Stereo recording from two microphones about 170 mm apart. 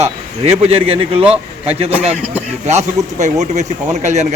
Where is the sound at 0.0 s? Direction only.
40° right (ahead or behind).